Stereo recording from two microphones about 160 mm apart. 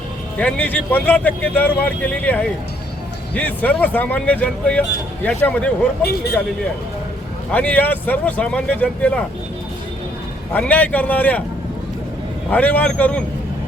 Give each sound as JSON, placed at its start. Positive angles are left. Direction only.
{"t": 0.3, "sound": "speech", "side_deg": 10}
{"t": 6.0, "sound": "speech", "side_deg": 80}
{"t": 7.5, "sound": "speech", "side_deg": 10}
{"t": 10.5, "sound": "speech", "side_deg": 10}
{"t": 12.5, "sound": "speech", "side_deg": 10}